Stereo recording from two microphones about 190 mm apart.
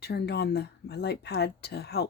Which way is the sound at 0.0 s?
60° left (ahead or behind).